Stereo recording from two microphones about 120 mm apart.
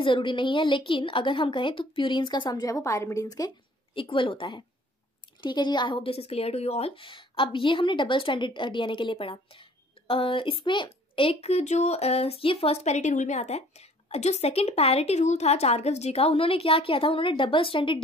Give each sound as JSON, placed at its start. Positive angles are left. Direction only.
{"t": 0.0, "sound": "a woman's voice", "side_deg": 45}
{"t": 3.9, "sound": "a woman's voice", "side_deg": 45}
{"t": 7.1, "sound": "a woman's voice", "side_deg": 45}